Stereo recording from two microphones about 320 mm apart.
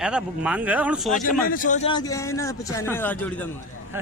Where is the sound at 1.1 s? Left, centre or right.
Left; by 3.5 s centre.